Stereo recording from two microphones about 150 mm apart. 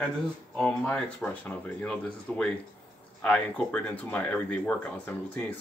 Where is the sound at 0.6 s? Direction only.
5° left (ahead or behind).